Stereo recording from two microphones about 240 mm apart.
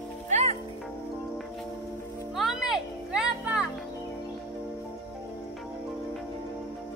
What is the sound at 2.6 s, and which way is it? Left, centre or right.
Music, centre.